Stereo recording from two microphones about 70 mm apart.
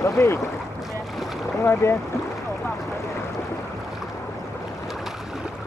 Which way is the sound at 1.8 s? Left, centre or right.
Left.